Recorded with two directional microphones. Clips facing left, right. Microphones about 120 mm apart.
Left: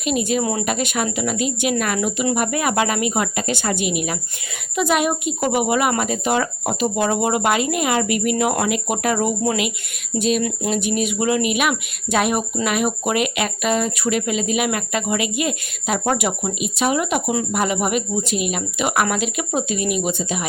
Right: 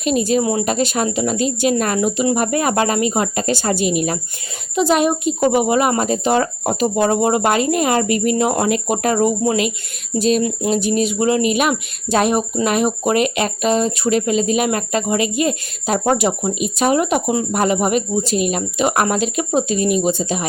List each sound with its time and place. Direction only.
0.0 s a woman's voice: 35° right (ahead or behind)